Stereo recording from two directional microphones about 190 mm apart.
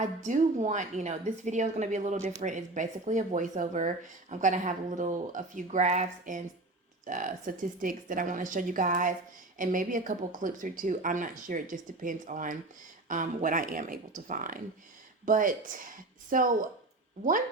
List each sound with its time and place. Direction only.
0.3 s speech: 40° right (ahead or behind)